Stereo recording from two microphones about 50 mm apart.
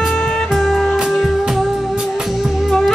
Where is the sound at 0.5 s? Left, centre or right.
Centre.